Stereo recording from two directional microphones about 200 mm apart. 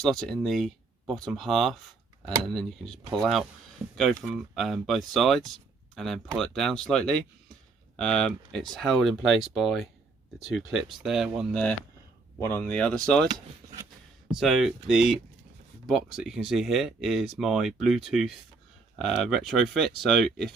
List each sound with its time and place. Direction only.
0.0 s speech: centre (ahead or behind)
13.2 s speech: 20° right (ahead or behind)
14.3 s speech: centre (ahead or behind)